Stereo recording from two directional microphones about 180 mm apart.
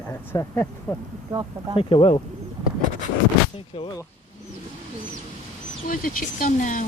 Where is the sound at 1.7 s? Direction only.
30° left (ahead or behind).